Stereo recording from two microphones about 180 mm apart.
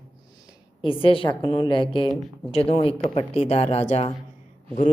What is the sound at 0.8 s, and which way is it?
A woman's voice, 30° left (ahead or behind).